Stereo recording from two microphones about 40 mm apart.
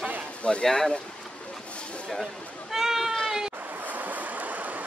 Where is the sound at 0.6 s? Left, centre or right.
Centre.